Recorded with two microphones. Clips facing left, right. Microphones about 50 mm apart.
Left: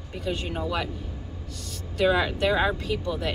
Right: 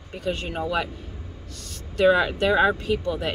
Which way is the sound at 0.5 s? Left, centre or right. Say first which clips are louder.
Right 4 dB; centre.